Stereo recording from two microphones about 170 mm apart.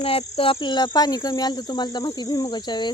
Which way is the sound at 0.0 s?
35° left (ahead or behind).